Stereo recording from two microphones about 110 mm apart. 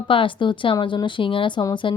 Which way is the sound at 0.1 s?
50° left (ahead or behind).